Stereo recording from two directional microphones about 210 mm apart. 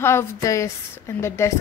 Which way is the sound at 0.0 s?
10° left (ahead or behind).